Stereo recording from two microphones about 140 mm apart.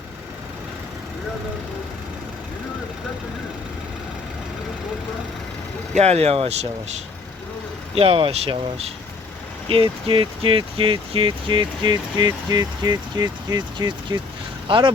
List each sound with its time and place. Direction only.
6.0 s speech: 50° right (ahead or behind)
7.9 s speech: 40° right (ahead or behind)